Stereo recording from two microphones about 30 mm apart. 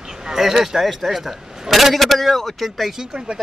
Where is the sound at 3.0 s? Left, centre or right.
Right.